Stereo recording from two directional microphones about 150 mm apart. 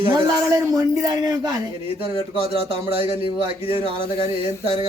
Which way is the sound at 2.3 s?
40° right (ahead or behind).